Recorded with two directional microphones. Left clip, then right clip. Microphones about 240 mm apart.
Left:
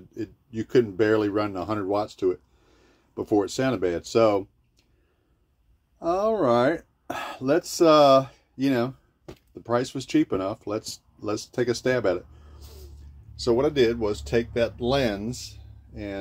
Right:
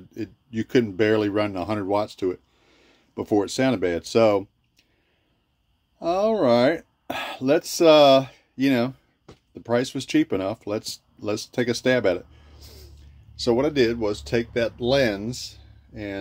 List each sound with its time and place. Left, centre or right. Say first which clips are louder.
0.1 s speech: right 2 dB; right
5.9 s speech: right 2 dB; right